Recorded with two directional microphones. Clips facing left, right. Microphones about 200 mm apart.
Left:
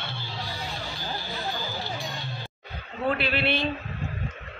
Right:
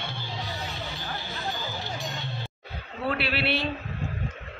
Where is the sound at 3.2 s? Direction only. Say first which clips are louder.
Left 1 dB; 5° right (ahead or behind).